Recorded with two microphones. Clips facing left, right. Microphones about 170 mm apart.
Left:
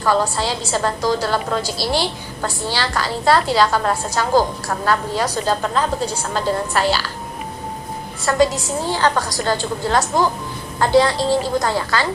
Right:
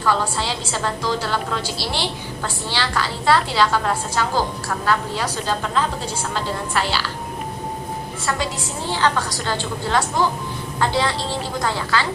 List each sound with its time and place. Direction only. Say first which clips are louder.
0.0 s a woman's voice: left 3 dB; 40° left (ahead or behind)
8.2 s a woman's voice: left 10 dB; 45° left (ahead or behind)